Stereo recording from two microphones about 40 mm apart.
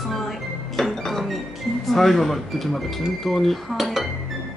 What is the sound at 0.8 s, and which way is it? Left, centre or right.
Music, centre.